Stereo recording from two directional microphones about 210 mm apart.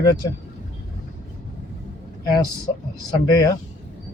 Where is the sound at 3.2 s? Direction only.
20° left (ahead or behind).